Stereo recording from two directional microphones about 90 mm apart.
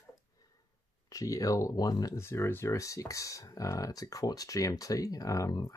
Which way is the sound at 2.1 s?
30° left (ahead or behind).